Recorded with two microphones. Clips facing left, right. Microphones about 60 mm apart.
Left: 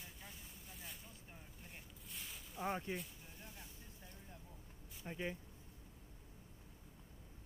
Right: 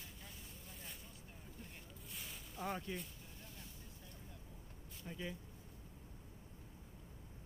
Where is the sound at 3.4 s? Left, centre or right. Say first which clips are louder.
Left 1 dB; left.